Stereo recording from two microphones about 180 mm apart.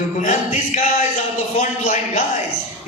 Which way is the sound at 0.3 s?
45° left (ahead or behind).